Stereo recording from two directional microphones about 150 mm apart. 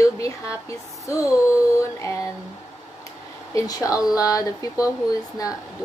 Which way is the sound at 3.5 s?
25° left (ahead or behind).